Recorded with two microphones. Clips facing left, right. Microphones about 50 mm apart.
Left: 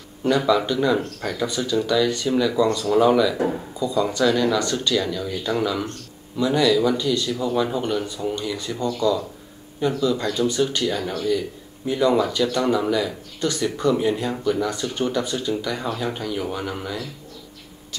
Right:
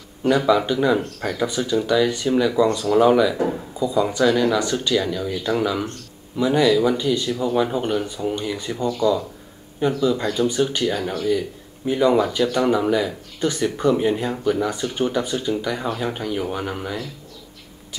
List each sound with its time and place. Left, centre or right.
0.5 s a man's voice: centre